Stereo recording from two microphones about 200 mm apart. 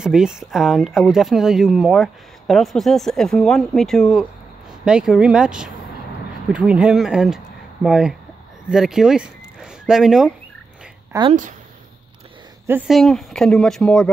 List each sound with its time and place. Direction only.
0.0 s speech: 5° right (ahead or behind)
11.1 s speech: 20° right (ahead or behind)
12.6 s speech: 5° right (ahead or behind)